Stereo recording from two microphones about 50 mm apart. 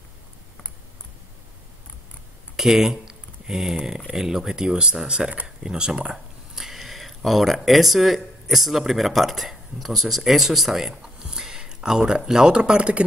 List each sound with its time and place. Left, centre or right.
2.5 s speech: centre
6.1 s speech: centre
11.0 s a sound: centre
12.3 s speech: centre